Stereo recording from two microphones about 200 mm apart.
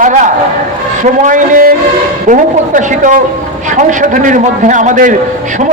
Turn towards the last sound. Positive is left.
turn(degrees=-40)  # may be behind; listen again after turning